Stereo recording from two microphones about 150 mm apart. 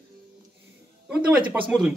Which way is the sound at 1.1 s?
10° right (ahead or behind).